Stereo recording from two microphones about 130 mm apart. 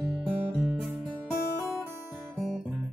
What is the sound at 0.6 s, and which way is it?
Music, centre (ahead or behind).